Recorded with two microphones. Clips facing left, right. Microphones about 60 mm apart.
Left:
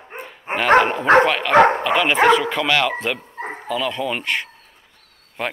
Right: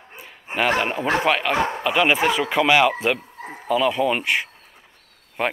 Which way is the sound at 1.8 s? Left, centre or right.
Centre.